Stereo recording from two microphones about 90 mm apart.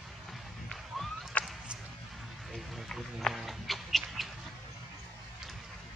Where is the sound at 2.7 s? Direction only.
Centre (ahead or behind).